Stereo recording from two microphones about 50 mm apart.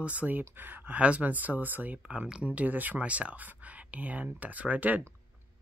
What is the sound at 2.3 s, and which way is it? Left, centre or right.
Speech, right.